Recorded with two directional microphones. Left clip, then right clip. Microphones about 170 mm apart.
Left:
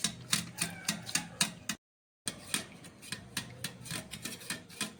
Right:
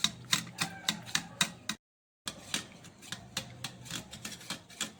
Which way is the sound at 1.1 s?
35° right (ahead or behind).